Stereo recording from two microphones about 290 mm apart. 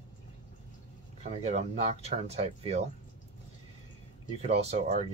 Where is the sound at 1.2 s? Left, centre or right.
Right.